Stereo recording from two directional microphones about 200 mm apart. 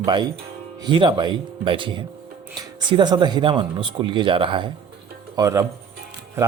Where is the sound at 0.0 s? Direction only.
20° right (ahead or behind).